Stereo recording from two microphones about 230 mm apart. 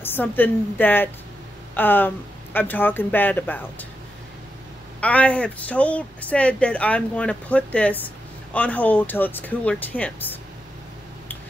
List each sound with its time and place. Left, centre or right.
0.0 s speech: centre
5.0 s speech: centre